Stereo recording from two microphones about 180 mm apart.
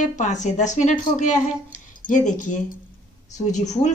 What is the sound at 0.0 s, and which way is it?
Speech, 45° left (ahead or behind).